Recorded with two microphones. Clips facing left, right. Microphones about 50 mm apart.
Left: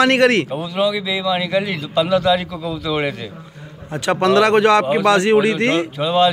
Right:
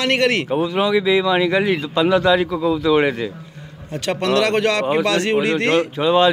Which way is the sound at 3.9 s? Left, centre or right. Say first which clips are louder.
Left 4 dB; centre.